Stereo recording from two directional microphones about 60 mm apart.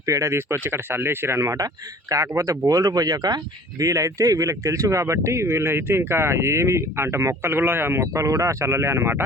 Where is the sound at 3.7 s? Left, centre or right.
Right.